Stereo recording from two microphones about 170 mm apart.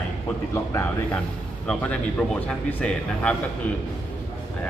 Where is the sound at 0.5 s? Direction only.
15° left (ahead or behind).